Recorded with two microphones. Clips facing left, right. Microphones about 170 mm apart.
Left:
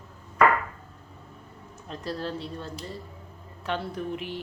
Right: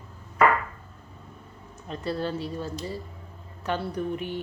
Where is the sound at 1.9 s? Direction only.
Centre (ahead or behind).